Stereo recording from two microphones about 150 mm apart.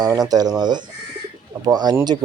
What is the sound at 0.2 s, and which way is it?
A man's voice, 25° right (ahead or behind).